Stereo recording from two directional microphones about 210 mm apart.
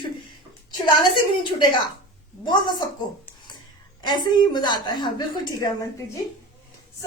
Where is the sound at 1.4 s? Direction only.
25° left (ahead or behind).